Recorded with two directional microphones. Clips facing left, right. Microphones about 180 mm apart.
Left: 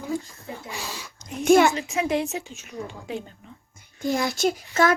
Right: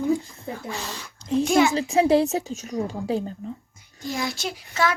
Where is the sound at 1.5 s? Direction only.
55° left (ahead or behind).